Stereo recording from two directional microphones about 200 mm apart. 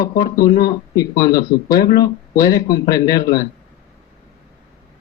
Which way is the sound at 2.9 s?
15° left (ahead or behind).